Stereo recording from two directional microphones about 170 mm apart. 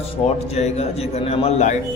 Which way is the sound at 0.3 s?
40° left (ahead or behind).